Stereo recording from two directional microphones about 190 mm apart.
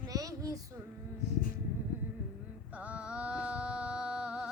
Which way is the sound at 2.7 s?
5° right (ahead or behind).